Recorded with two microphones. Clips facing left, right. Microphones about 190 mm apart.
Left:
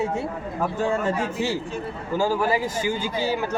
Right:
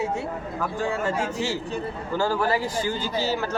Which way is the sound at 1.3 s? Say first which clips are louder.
Left 1 dB; 15° left (ahead or behind).